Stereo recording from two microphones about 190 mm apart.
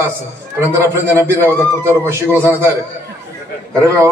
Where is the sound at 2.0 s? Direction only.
10° right (ahead or behind).